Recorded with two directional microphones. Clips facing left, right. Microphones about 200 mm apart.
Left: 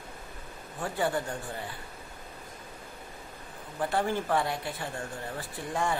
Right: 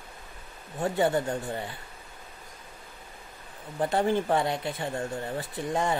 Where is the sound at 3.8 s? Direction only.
25° right (ahead or behind).